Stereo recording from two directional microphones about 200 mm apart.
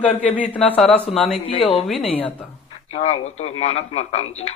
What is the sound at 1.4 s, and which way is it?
A woman's voice, 30° left (ahead or behind).